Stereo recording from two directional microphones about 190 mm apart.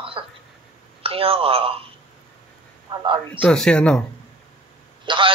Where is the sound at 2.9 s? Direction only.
25° right (ahead or behind).